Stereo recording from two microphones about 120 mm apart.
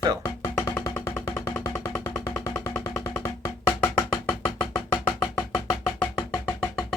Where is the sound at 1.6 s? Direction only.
25° left (ahead or behind).